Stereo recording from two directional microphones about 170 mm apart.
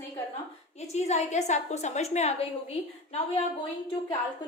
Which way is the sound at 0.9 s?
40° left (ahead or behind).